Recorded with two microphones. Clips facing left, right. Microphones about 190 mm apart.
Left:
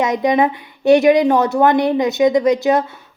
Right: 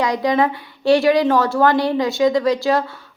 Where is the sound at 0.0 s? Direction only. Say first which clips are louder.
Left 2 dB; 20° left (ahead or behind).